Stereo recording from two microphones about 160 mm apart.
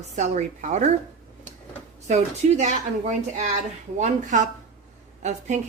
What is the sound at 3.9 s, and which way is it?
Speech, 50° right (ahead or behind).